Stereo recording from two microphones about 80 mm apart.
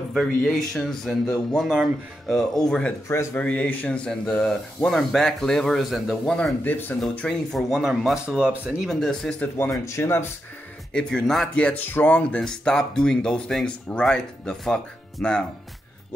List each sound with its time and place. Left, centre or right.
0.1 s speech: centre
6.6 s speech: left
7.2 s speech: centre
8.8 s speech: centre
9.6 s speech: left
10.9 s speech: centre
12.4 s speech: centre